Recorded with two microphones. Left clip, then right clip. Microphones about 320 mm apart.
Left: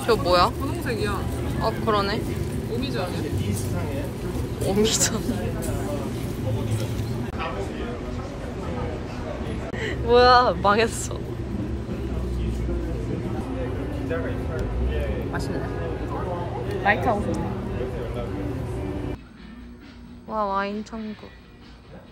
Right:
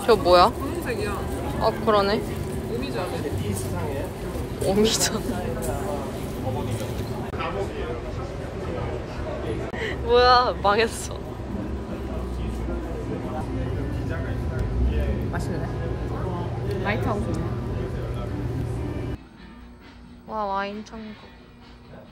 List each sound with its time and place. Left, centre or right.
0.0 s speech: centre
1.6 s speech: centre
4.6 s speech: centre
9.8 s speech: centre
16.8 s speech: centre
20.3 s a woman's voice: centre